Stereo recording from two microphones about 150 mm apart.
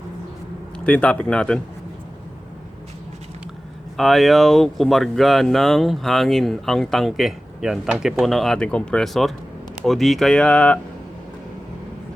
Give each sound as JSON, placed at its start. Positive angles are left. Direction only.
{"t": 0.9, "sound": "a man's voice", "side_deg": 10}
{"t": 3.9, "sound": "speech", "side_deg": 0}